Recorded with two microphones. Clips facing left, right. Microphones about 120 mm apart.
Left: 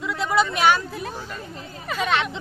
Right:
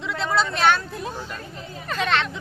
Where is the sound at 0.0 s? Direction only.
10° left (ahead or behind).